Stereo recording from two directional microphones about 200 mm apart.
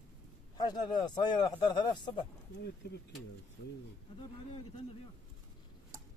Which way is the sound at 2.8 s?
55° left (ahead or behind).